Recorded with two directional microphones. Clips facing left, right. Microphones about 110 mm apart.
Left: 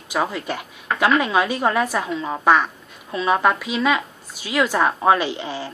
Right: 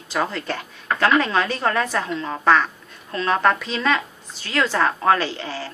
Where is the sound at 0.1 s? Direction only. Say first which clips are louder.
Left 1 dB; 10° left (ahead or behind).